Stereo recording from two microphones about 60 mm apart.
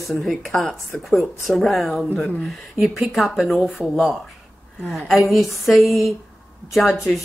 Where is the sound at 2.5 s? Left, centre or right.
Centre.